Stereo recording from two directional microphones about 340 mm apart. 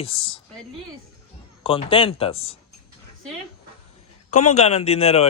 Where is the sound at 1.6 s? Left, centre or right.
Centre.